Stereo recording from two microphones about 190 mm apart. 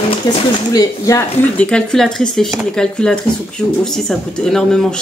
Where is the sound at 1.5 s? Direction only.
5° left (ahead or behind).